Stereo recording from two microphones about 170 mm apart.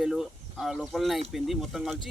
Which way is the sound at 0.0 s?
Centre (ahead or behind).